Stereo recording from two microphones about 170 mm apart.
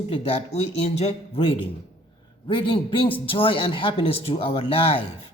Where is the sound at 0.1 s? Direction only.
35° left (ahead or behind).